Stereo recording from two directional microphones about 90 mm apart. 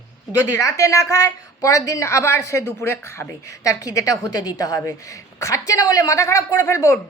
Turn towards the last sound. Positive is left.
turn(degrees=35)  # may be behind; listen again after turning